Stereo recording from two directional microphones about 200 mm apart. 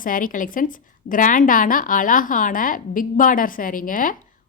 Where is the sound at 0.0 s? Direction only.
45° left (ahead or behind).